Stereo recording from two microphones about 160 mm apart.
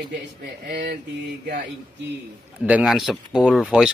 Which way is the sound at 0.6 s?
70° right (ahead or behind).